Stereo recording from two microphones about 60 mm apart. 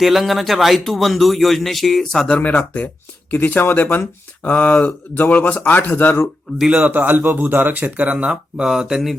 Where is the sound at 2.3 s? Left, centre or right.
Left.